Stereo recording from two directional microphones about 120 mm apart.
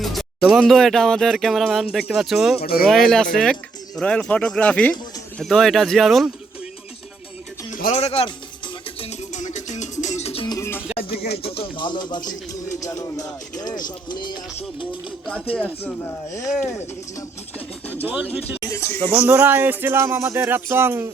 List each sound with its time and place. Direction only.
0.0 s speech: centre (ahead or behind)
7.7 s speech: 75° left (ahead or behind); by 8.3 s 60° left (ahead or behind)
9.0 s music: 85° left; by 10.4 s 65° left (ahead or behind)
10.6 s music: 20° left (ahead or behind)
10.9 s music: 50° left (ahead or behind)
12.8 s music: 30° left (ahead or behind)
15.5 s speech: 10° left (ahead or behind)
16.6 s speech: 25° left (ahead or behind)
17.8 s pigeon: 15° left (ahead or behind)
18.6 s speech: 25° left (ahead or behind)
19.3 s speech: 15° right (ahead or behind)